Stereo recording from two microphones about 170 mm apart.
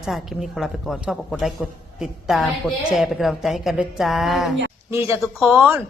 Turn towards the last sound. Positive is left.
turn(degrees=-5)  # may be behind; listen again after turning